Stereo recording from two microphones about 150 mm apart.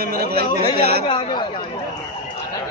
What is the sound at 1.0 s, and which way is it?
Speech, 35° left (ahead or behind).